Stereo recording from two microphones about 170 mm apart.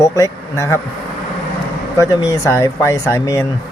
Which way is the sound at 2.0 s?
20° left (ahead or behind).